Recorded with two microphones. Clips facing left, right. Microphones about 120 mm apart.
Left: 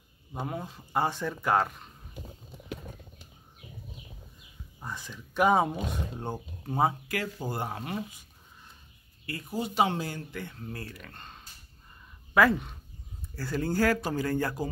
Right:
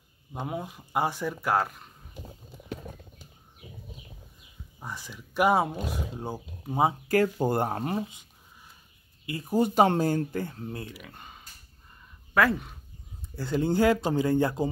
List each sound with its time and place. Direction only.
0.5 s speech: 15° right (ahead or behind)
4.7 s speech: 10° right (ahead or behind)
7.3 s speech: 55° right (ahead or behind)
9.2 s speech: 20° right (ahead or behind)
9.5 s speech: 50° right (ahead or behind)
10.9 s speech: 10° right (ahead or behind)
13.4 s speech: 20° right (ahead or behind)